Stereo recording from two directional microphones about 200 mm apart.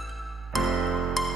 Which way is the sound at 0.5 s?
Centre (ahead or behind).